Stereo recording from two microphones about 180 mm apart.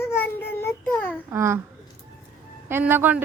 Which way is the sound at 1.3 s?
15° right (ahead or behind).